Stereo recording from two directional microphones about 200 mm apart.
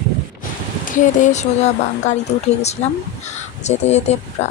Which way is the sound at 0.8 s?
40° left (ahead or behind).